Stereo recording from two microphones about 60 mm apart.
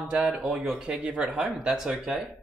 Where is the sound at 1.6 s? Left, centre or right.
Centre.